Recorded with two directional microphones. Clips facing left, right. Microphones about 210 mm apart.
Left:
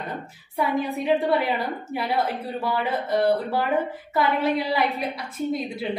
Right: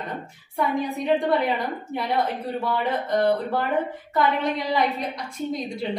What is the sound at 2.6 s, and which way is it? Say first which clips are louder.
A woman's voice: even; 5° left (ahead or behind).